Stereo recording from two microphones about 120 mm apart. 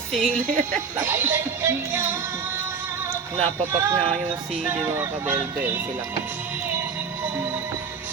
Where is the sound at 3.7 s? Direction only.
20° right (ahead or behind).